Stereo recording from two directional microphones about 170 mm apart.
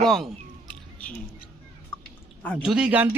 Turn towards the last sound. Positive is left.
turn(degrees=-5)  # may be behind; listen again after turning